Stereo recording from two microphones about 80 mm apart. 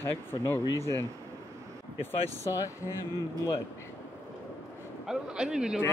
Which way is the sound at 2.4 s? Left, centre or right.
Left.